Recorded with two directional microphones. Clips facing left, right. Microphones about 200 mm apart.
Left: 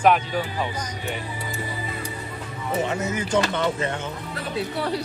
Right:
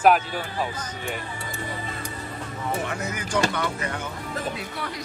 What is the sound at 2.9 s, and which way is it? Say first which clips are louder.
Music: left 5 dB; 25° left (ahead or behind).